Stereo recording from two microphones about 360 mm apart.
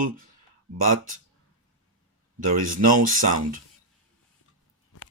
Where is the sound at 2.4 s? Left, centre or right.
Right.